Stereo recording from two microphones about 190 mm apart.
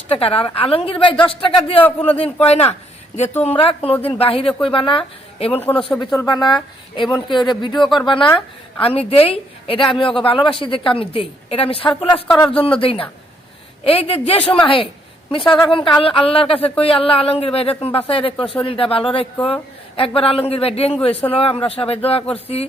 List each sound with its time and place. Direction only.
0.1 s speech: 30° left (ahead or behind)
1.8 s a man's voice: 10° left (ahead or behind)
2.1 s speech: 30° left (ahead or behind)
5.5 s a man's voice: 10° left (ahead or behind); by 22.2 s 30° left (ahead or behind)